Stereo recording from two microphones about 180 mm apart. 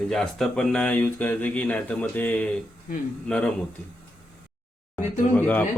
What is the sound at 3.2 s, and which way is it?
Speech, 5° left (ahead or behind).